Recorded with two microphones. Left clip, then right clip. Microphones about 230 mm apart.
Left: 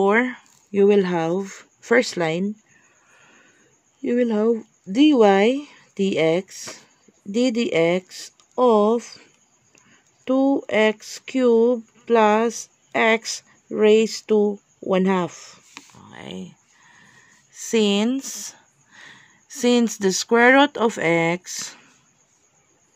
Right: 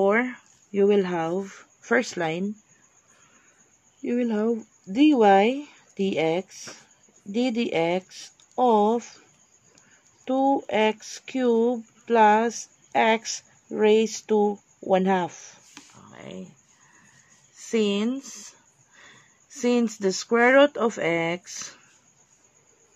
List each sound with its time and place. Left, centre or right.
0.0 s speech: left
4.0 s speech: left
10.2 s speech: left
16.1 s a sound: left
17.6 s speech: left